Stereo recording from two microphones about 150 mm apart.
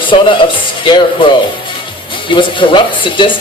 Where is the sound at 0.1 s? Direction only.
35° left (ahead or behind).